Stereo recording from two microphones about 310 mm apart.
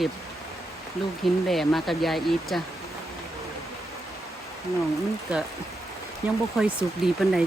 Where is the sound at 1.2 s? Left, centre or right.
Centre.